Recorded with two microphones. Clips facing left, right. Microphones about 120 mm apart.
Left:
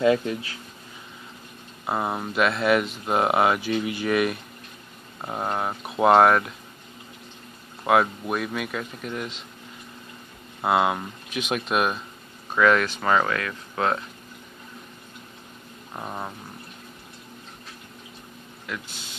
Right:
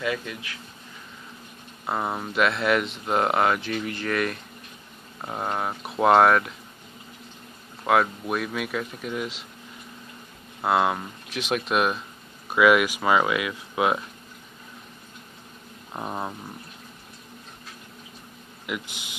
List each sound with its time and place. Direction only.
0.0 s speech: 30° left (ahead or behind)
1.9 s speech: 5° left (ahead or behind)
7.8 s speech: 5° left (ahead or behind)
10.6 s speech: 5° left (ahead or behind)
12.4 s speech: 10° right (ahead or behind)
15.9 s speech: 10° right (ahead or behind)
18.7 s speech: 15° right (ahead or behind)